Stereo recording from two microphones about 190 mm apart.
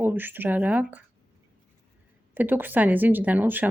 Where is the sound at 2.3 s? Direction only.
10° right (ahead or behind).